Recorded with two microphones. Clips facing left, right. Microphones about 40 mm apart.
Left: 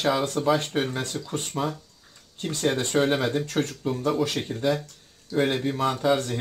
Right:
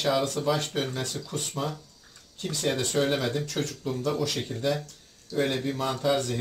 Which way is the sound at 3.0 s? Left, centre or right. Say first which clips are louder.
Left 3 dB; left.